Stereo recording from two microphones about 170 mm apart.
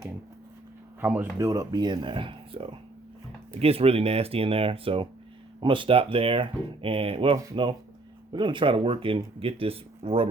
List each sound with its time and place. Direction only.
1.0 s speech: 10° right (ahead or behind)
1.4 s speech: 20° right (ahead or behind)